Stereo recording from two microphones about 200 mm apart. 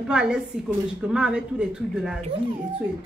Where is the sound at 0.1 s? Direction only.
5° right (ahead or behind).